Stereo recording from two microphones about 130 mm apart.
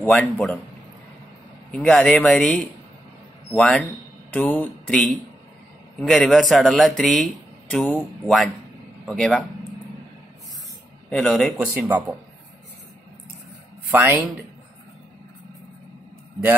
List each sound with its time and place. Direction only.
0.0 s a man's voice: 10° left (ahead or behind)
1.7 s a man's voice: 5° left (ahead or behind)
4.9 s a man's voice: centre (ahead or behind)
11.1 s speech: 5° left (ahead or behind)
11.6 s speech: 10° right (ahead or behind)
13.8 s speech: 15° right (ahead or behind)